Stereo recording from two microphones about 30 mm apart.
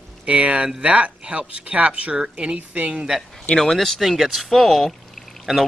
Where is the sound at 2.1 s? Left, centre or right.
Right.